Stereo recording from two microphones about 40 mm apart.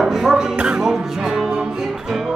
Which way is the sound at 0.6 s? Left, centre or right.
Right.